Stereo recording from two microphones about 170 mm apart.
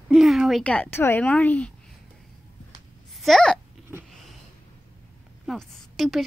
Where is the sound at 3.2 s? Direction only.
Centre (ahead or behind).